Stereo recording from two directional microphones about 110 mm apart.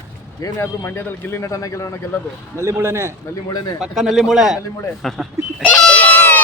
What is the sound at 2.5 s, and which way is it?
Speech, 25° right (ahead or behind).